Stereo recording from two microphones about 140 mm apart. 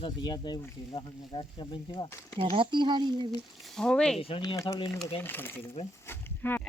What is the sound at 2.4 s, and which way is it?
Speech, 40° right (ahead or behind).